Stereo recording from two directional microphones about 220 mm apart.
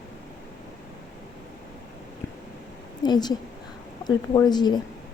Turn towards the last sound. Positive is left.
turn(degrees=20)  # may be behind; listen again after turning